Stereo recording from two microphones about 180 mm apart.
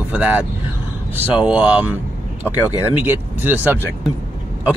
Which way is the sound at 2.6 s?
20° left (ahead or behind).